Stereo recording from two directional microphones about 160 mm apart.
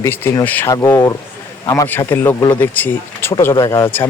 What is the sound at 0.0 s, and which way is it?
Speech, 15° left (ahead or behind).